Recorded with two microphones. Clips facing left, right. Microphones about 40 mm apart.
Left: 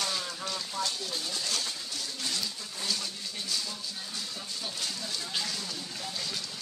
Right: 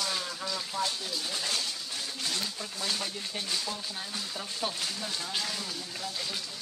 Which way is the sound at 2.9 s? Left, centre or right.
Right.